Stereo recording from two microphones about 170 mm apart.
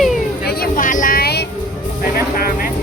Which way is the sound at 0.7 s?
50° left (ahead or behind).